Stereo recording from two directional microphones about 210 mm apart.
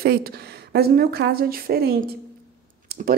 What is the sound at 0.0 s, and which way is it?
A woman's voice, 45° right (ahead or behind).